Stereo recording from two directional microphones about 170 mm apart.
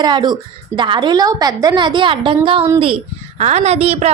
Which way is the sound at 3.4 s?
40° right (ahead or behind).